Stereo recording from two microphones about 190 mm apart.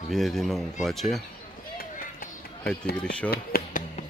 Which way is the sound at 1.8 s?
50° left (ahead or behind).